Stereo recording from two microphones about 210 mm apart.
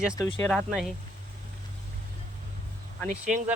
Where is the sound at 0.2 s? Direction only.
10° left (ahead or behind).